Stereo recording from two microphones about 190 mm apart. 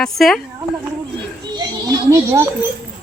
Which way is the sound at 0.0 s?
Centre (ahead or behind).